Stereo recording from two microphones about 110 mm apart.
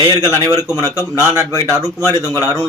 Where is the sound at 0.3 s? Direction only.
30° right (ahead or behind).